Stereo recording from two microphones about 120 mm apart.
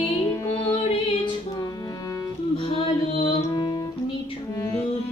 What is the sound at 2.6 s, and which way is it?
Music, 55° left (ahead or behind).